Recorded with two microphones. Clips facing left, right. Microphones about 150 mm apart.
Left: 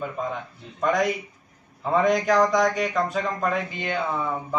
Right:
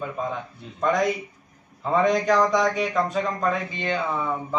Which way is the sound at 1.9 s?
Centre (ahead or behind).